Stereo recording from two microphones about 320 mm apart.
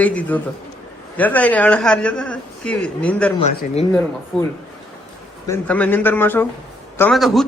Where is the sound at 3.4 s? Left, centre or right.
Centre.